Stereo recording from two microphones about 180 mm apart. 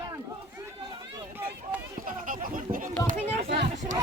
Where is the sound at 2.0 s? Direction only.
50° right (ahead or behind).